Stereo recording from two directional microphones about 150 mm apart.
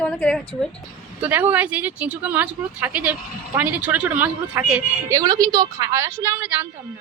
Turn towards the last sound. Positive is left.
turn(degrees=-10)  # may be behind; listen again after turning